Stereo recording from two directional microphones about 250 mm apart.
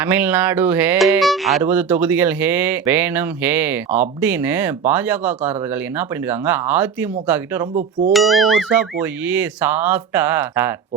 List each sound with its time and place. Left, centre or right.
0.0 s speech: centre
6.4 s speech: centre
7.8 s speech: right
8.1 s speech: centre